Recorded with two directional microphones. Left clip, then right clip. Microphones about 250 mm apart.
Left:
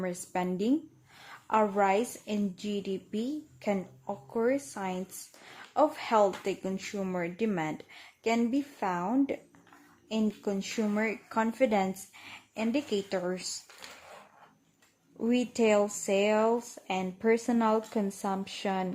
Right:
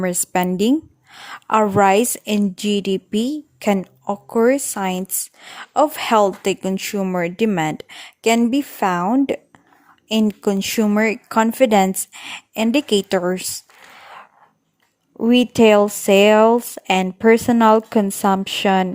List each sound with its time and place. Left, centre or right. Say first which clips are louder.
0.0 s a woman's voice: right 13 dB; right
15.2 s speech: right 14 dB; right